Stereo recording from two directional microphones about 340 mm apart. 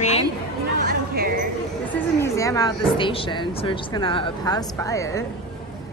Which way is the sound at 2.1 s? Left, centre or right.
Centre.